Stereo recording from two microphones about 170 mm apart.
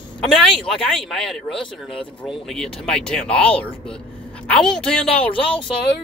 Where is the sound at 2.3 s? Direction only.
5° left (ahead or behind).